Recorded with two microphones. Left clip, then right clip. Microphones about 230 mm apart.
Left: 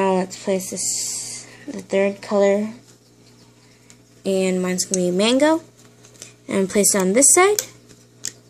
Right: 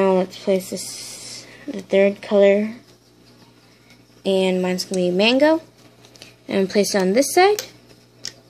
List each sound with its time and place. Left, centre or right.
0.0 s a sound: centre
0.3 s speech: centre
1.7 s speech: centre
4.3 s speech: centre